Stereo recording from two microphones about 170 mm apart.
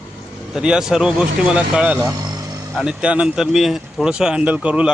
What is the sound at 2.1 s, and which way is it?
Vehicle, 20° right (ahead or behind).